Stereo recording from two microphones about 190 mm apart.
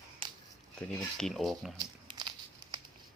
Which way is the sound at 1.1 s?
Centre (ahead or behind).